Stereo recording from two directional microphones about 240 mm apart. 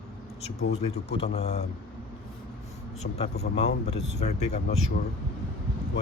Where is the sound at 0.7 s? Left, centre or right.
Left.